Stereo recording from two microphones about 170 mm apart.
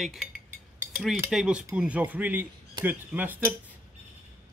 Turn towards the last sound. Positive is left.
turn(degrees=-10)  # may be behind; listen again after turning